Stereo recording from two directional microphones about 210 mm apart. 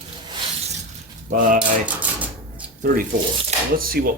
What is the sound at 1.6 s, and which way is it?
Typewriter, 5° right (ahead or behind).